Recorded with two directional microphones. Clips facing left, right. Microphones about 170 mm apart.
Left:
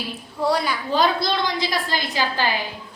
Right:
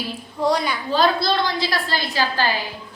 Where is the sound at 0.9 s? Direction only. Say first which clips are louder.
Right 2 dB; 15° left (ahead or behind).